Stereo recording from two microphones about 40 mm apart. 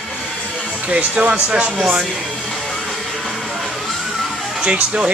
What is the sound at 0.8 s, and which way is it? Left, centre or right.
Speech, right.